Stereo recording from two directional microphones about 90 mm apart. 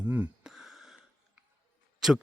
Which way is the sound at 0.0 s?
15° right (ahead or behind).